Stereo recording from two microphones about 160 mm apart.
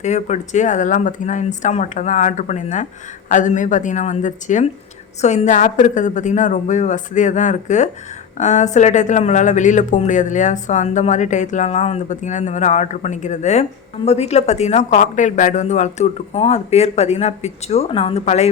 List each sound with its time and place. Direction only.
0.0 s speech: 45° left (ahead or behind)